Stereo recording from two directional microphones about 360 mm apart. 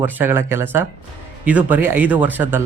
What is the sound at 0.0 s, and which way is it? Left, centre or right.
Speech, centre.